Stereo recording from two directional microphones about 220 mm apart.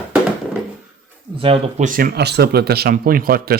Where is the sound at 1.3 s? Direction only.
25° right (ahead or behind).